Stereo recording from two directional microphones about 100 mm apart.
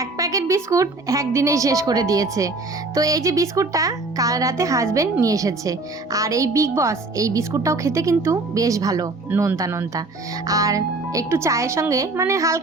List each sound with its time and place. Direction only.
0.0 s a woman's voice: 35° right (ahead or behind)